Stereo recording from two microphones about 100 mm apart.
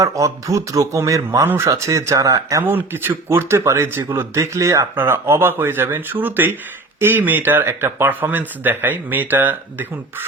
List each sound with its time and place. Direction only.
0.0 s speech: 35° right (ahead or behind)
2.6 s speech: 20° right (ahead or behind)